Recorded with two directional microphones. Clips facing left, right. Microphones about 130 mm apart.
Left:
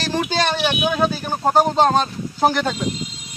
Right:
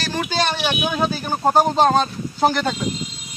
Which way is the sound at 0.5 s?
Centre (ahead or behind).